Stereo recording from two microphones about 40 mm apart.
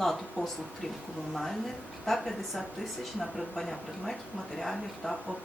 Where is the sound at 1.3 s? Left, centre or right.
Centre.